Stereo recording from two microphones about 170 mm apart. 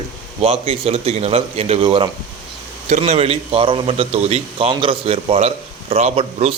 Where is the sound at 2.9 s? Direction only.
40° right (ahead or behind).